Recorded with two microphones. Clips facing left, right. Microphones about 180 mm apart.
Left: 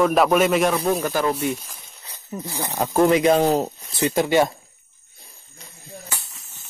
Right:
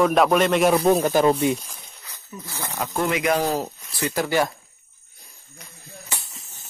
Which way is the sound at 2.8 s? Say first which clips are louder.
Left 7 dB; 35° left (ahead or behind).